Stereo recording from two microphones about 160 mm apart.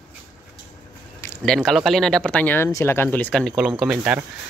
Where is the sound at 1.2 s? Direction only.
10° left (ahead or behind); by 4.2 s 5° right (ahead or behind).